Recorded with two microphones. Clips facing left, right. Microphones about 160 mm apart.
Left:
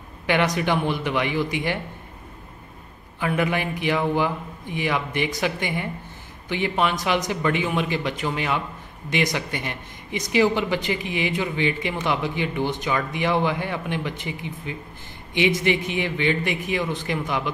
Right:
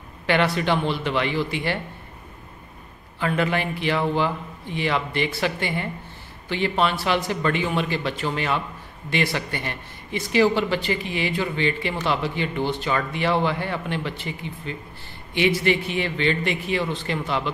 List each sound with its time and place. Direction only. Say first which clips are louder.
0.3 s speech: even; 15° left (ahead or behind)
3.2 s speech: even; 15° left (ahead or behind)